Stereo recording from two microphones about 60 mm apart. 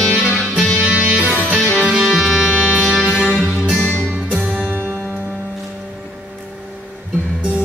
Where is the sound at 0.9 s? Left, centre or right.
Right.